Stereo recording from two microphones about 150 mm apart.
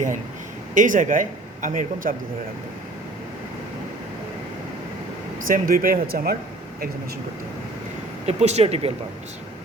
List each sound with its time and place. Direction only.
0.7 s speech: 60° right (ahead or behind)
5.5 s speech: 65° right (ahead or behind)
8.3 s speech: 45° right (ahead or behind)